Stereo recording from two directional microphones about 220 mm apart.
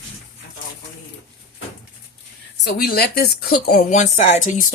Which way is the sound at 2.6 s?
45° left (ahead or behind).